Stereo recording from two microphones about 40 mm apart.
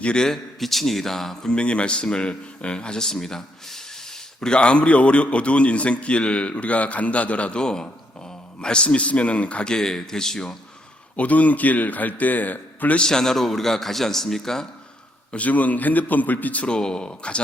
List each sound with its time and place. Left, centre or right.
0.0 s speech: left
0.3 s a man's voice: centre
1.5 s a man's voice: left
7.6 s a man's voice: left
9.6 s a man's voice: centre
11.2 s a man's voice: left
13.0 s a man's voice: centre
15.3 s a man's voice: left
16.6 s speech: left